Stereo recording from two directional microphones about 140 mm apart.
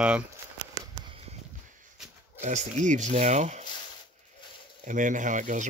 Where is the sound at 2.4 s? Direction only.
60° right (ahead or behind).